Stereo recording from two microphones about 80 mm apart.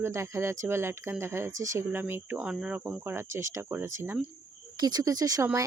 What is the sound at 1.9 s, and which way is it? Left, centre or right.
Speech, right.